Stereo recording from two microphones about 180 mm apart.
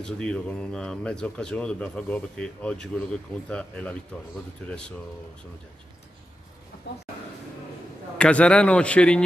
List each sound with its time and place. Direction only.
0.0 s a man's voice: 5° left (ahead or behind)
6.8 s speech: 70° left (ahead or behind)
8.2 s a man's voice: 5° left (ahead or behind)